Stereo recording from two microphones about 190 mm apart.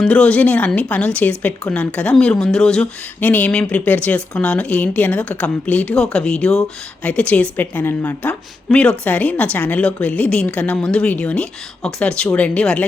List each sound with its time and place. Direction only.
0.0 s a woman's voice: 5° left (ahead or behind)